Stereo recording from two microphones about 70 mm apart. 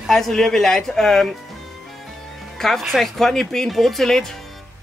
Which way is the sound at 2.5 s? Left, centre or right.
Centre.